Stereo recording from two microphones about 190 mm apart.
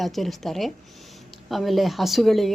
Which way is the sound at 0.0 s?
Centre (ahead or behind).